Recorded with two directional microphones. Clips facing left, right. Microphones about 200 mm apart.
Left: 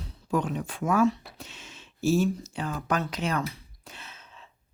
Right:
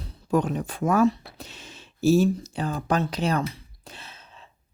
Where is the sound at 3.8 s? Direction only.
35° right (ahead or behind).